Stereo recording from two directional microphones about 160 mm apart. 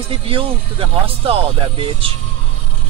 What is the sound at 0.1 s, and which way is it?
Speech, 35° right (ahead or behind).